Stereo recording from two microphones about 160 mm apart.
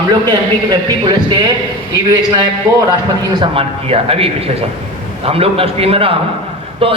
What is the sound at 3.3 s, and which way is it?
A man's voice, 35° right (ahead or behind).